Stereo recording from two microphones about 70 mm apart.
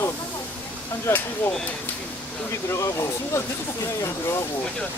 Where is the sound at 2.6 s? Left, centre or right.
Left.